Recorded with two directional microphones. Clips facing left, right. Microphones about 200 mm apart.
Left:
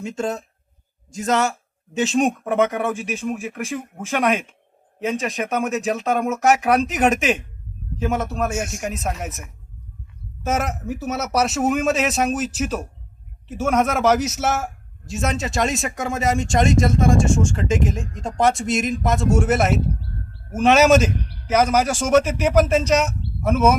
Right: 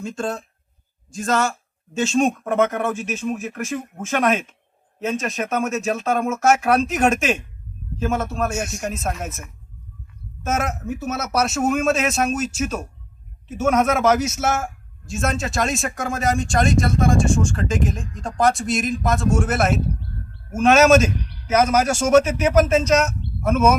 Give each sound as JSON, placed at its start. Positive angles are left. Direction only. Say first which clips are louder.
{"t": 0.0, "sound": "speech", "louder": "left 1 dB", "side_deg": 20}
{"t": 10.5, "sound": "speech", "louder": "even", "side_deg": 15}
{"t": 20.0, "sound": "bird", "louder": "even", "side_deg": 35}
{"t": 20.6, "sound": "speech", "louder": "right 1 dB", "side_deg": 15}
{"t": 21.1, "sound": "a sound", "louder": "left 1 dB", "side_deg": 55}
{"t": 21.5, "sound": "speech", "louder": "even", "side_deg": 15}